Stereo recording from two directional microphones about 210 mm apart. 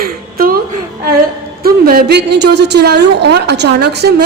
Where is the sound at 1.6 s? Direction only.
45° right (ahead or behind).